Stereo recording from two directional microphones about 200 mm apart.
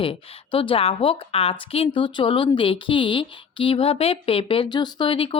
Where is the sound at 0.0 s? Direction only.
25° left (ahead or behind).